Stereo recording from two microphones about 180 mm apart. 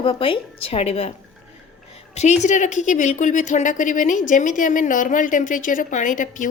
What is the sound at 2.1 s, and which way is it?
A woman's voice, 40° left (ahead or behind).